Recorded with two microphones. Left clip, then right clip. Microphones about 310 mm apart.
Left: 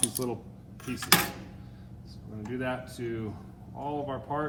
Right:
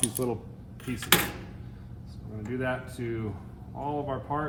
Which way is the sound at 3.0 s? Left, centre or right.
Centre.